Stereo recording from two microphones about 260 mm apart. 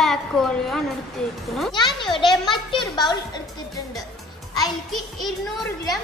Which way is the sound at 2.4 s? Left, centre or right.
Centre.